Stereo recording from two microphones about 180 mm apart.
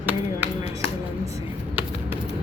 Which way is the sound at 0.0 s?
10° right (ahead or behind).